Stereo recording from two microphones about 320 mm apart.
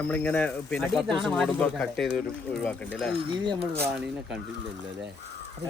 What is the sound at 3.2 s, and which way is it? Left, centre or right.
Speech, centre.